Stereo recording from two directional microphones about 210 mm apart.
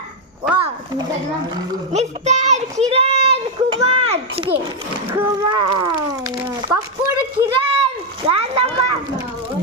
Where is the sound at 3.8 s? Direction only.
30° right (ahead or behind).